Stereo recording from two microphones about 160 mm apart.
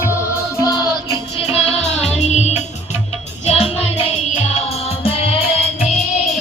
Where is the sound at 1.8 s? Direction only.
45° left (ahead or behind).